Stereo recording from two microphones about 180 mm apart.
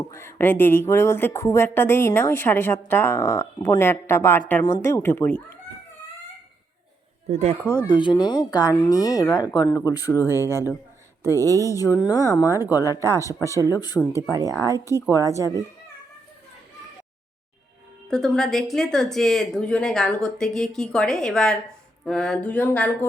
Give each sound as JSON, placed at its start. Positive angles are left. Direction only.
{"t": 0.0, "sound": "speech", "side_deg": 15}
{"t": 7.3, "sound": "speech", "side_deg": -35}
{"t": 7.6, "sound": "speech", "side_deg": -10}
{"t": 7.9, "sound": "speech", "side_deg": 25}
{"t": 11.3, "sound": "speech", "side_deg": -15}
{"t": 11.7, "sound": "speech", "side_deg": 20}
{"t": 14.2, "sound": "speech", "side_deg": -20}
{"t": 18.1, "sound": "speech", "side_deg": 0}